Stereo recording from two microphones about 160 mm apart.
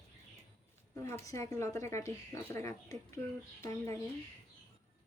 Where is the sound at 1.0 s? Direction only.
15° left (ahead or behind).